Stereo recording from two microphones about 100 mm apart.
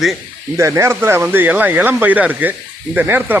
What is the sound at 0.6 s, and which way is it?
Speech, 30° right (ahead or behind).